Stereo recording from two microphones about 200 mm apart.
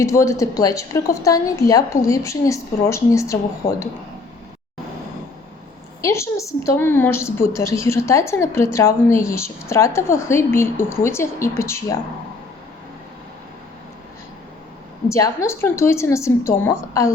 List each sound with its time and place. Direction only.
0.0 s a woman's voice: 15° left (ahead or behind)
6.0 s a woman's voice: 15° left (ahead or behind)
15.1 s a woman's voice: 15° left (ahead or behind)